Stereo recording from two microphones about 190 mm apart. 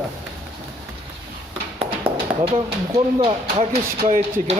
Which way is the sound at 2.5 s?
30° right (ahead or behind).